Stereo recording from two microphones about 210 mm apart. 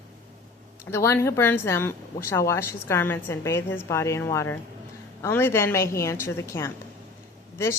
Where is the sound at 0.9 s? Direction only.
10° left (ahead or behind).